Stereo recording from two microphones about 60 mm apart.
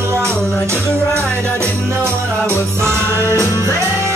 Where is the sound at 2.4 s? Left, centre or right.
Left.